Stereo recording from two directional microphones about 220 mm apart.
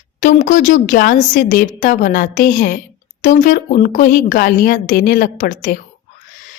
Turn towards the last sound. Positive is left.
turn(degrees=35)  # may be behind; listen again after turning